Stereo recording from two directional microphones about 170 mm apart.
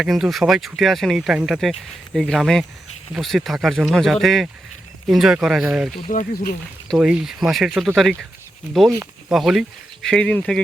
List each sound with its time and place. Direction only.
0.0 s speech: centre (ahead or behind)
6.1 s speech: 55° left (ahead or behind)
6.8 s speech: centre (ahead or behind)
9.3 s speech: centre (ahead or behind)